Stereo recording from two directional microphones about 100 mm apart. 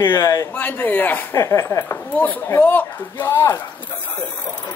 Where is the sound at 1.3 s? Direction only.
30° left (ahead or behind).